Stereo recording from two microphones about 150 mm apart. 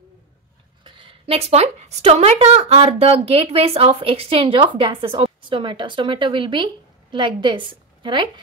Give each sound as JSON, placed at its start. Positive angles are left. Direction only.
{"t": 0.8, "sound": "a woman's voice", "side_deg": -35}